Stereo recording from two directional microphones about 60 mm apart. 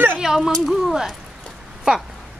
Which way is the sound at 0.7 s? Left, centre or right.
Centre.